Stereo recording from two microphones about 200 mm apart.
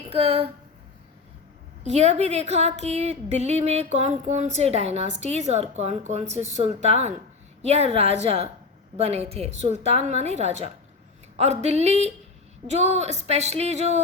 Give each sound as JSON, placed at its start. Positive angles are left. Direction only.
{"t": 0.1, "sound": "speech", "side_deg": -30}
{"t": 1.8, "sound": "a woman's voice", "side_deg": -35}